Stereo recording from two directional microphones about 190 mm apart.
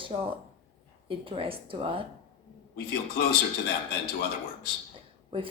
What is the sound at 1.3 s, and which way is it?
Speech, 30° right (ahead or behind).